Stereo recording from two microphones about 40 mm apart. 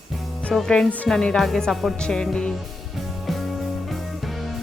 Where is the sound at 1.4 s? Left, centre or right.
Centre.